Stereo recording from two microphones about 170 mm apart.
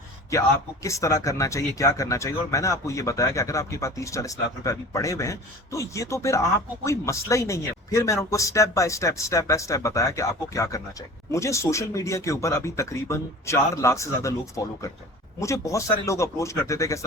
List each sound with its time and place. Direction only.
0.3 s speech: 20° left (ahead or behind)